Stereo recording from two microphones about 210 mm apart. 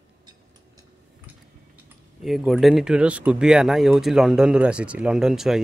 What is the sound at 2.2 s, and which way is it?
Speech, centre (ahead or behind).